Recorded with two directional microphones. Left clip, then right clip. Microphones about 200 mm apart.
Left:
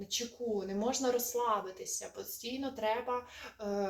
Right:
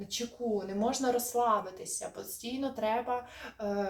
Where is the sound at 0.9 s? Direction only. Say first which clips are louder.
Right 2 dB; 5° left (ahead or behind).